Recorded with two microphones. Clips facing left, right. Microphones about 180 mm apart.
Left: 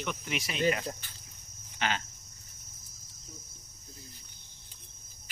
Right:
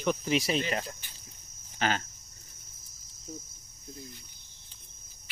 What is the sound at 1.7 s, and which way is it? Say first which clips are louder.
Speech: right 3 dB; 40° right (ahead or behind).